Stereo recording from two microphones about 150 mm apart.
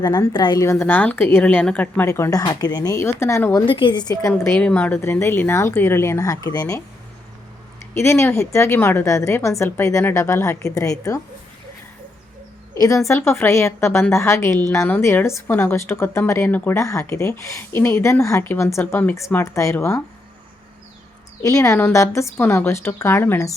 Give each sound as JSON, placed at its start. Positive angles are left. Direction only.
{"t": 0.0, "sound": "a woman's voice", "side_deg": 25}
{"t": 3.7, "sound": "a woman's voice", "side_deg": 35}
{"t": 7.9, "sound": "a woman's voice", "side_deg": 20}
{"t": 12.7, "sound": "a woman's voice", "side_deg": 25}
{"t": 21.4, "sound": "a woman's voice", "side_deg": 20}